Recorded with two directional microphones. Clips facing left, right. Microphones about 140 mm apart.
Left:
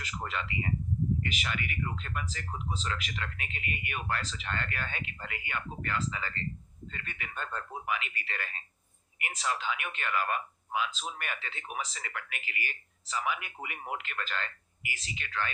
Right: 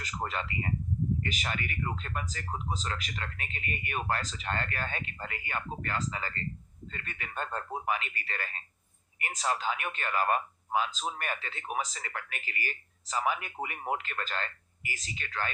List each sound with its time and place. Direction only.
0.0 s a man's voice: 40° right (ahead or behind)